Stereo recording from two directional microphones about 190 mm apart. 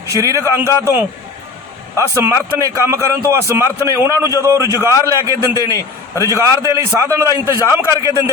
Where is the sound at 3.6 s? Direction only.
15° left (ahead or behind).